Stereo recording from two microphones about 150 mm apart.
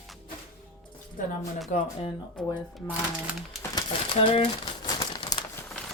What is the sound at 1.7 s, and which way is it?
Speech, 55° left (ahead or behind).